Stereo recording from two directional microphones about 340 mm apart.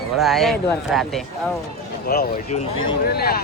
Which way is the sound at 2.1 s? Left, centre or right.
Left.